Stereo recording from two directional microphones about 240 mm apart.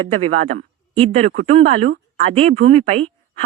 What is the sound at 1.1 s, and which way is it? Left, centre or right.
Speech, right.